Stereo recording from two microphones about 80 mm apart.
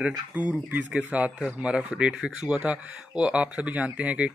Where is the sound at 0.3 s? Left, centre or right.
Centre.